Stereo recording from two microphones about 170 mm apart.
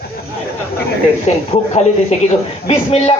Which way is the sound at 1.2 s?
40° left (ahead or behind).